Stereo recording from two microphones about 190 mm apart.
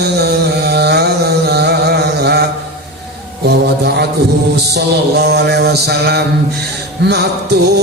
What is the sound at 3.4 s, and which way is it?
Mantra, 60° right (ahead or behind).